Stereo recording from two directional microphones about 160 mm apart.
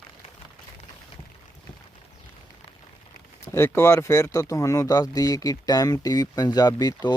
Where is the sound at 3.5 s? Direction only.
15° left (ahead or behind).